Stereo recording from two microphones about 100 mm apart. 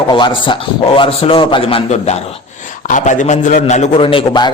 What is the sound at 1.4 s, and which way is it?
A man's voice, 55° left (ahead or behind).